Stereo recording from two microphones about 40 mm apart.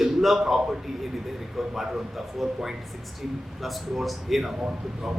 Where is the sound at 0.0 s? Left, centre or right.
Centre.